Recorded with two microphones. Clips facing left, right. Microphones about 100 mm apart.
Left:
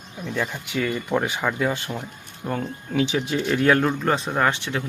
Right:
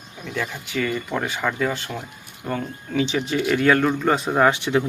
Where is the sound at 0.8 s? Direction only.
15° left (ahead or behind).